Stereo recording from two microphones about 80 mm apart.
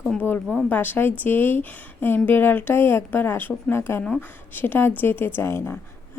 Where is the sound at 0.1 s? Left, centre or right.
Centre.